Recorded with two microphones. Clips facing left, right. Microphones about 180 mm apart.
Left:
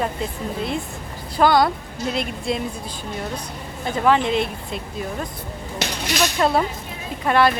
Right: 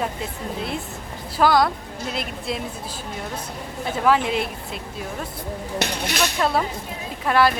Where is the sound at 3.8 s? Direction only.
5° right (ahead or behind).